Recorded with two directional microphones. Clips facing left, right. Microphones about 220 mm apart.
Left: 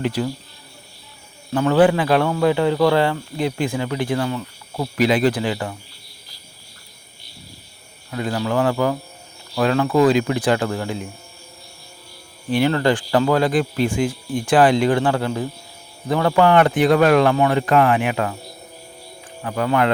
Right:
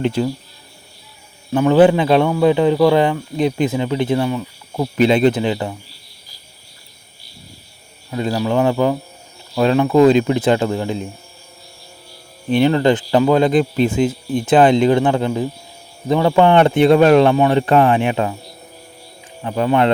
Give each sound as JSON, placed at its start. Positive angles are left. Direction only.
{"t": 0.0, "sound": "speech", "side_deg": -25}
{"t": 1.5, "sound": "speech", "side_deg": -20}
{"t": 8.1, "sound": "speech", "side_deg": -25}
{"t": 12.5, "sound": "speech", "side_deg": -20}
{"t": 19.4, "sound": "speech", "side_deg": -25}